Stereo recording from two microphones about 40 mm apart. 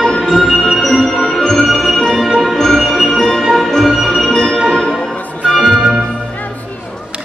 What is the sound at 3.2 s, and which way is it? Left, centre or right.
Music, centre.